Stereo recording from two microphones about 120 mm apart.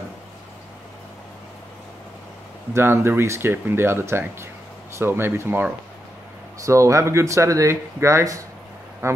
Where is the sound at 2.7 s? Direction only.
20° right (ahead or behind).